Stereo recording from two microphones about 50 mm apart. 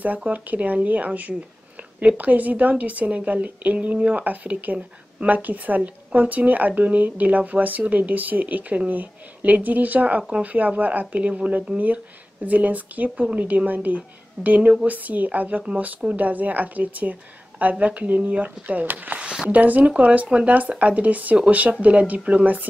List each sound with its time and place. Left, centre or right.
0.0 s a woman's voice: right